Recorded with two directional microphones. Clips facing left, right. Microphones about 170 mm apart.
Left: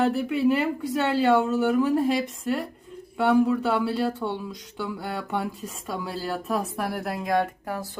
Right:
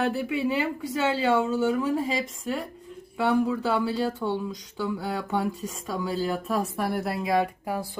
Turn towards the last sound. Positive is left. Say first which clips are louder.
# right 1 dB
turn(degrees=-10)  # may be behind; listen again after turning